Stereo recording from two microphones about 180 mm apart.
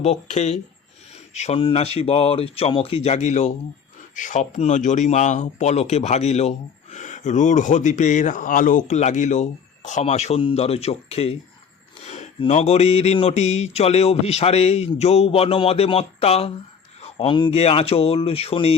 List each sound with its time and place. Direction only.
0.0 s speech: 40° left (ahead or behind)